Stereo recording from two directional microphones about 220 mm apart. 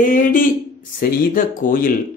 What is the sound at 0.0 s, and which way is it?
Speech, 40° left (ahead or behind).